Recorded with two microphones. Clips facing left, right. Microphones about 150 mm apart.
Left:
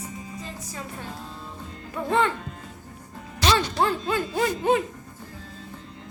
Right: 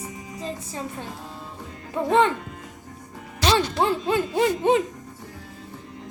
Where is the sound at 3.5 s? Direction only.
20° right (ahead or behind).